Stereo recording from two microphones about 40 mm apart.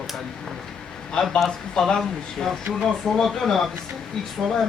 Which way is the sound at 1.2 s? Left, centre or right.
Centre.